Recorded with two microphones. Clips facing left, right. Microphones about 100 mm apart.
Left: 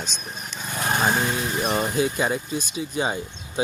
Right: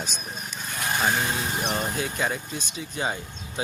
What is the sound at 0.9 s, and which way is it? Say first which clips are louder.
Lawn mower: left 3 dB; 30° left (ahead or behind).